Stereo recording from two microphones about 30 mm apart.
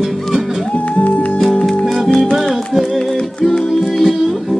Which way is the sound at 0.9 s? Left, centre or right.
Left.